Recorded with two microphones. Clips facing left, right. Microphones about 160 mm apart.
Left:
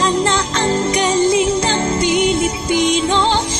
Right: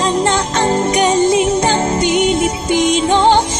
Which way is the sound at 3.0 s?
20° right (ahead or behind).